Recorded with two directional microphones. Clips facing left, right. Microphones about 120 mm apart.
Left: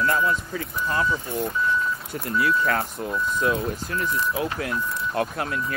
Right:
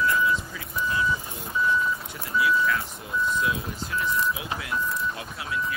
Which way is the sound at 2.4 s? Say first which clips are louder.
Left 1 dB; 55° left (ahead or behind).